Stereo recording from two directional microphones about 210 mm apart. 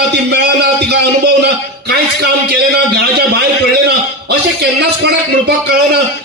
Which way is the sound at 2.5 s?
50° right (ahead or behind).